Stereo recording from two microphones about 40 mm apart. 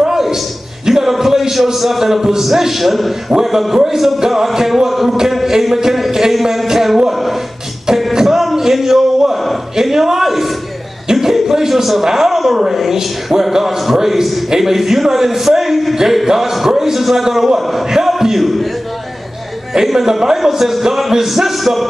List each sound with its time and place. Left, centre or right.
0.0 s a sound: centre
0.8 s a man's voice: centre
5.3 s music: centre
7.1 s a sound: centre
11.1 s a man's voice: centre
19.7 s a man's voice: centre